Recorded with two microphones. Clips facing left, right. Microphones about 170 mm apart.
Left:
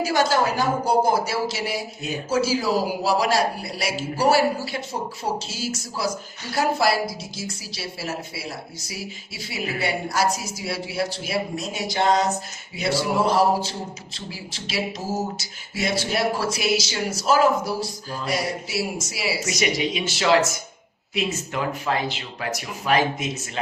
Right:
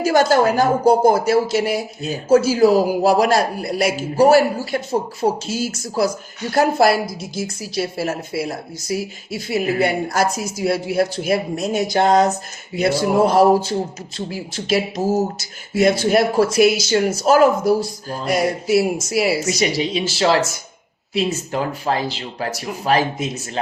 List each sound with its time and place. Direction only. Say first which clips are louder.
0.0 s speech: right 6 dB; 50° right (ahead or behind)
19.5 s speech: right 4 dB; 30° right (ahead or behind)